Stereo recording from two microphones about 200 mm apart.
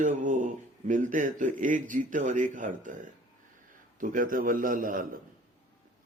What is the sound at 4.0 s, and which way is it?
Speech, 40° right (ahead or behind).